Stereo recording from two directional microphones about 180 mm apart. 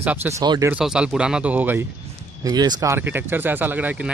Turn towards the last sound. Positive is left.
turn(degrees=-10)  # may be behind; listen again after turning